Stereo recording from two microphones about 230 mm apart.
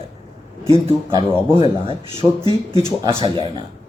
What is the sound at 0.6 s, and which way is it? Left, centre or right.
Speech, centre.